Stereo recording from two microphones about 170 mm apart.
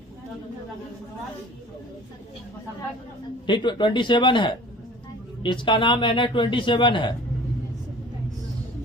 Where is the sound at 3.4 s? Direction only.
25° left (ahead or behind).